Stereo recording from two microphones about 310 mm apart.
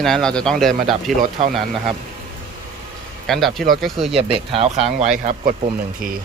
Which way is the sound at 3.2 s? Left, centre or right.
Centre.